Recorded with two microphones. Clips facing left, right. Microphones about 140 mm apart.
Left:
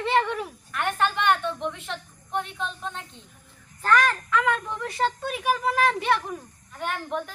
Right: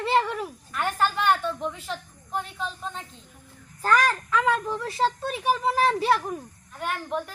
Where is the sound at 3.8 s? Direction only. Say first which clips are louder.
Even; 35° right (ahead or behind).